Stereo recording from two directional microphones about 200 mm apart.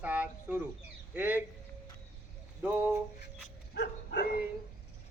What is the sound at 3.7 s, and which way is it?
Dog, 60° left (ahead or behind).